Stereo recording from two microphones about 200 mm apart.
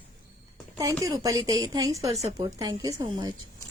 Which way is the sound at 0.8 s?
15° right (ahead or behind).